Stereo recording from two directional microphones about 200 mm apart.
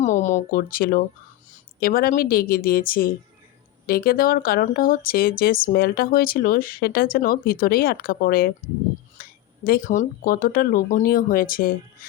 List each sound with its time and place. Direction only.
0.0 s speech: 35° left (ahead or behind)
9.2 s a sound: 45° left (ahead or behind)
9.6 s speech: 45° left (ahead or behind)